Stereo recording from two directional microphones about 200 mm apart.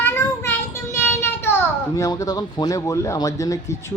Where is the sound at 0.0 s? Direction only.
10° left (ahead or behind).